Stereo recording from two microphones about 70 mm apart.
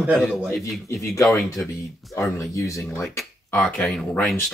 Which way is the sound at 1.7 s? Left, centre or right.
Left.